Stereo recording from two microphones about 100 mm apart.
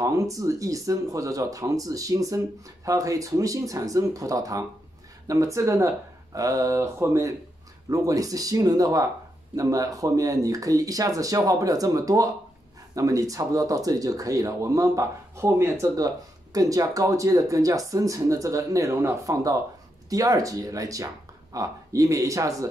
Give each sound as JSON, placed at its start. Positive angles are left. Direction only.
{"t": 0.0, "sound": "speech", "side_deg": -35}